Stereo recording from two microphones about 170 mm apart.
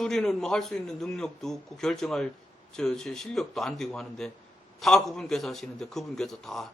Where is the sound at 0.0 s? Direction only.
Centre (ahead or behind).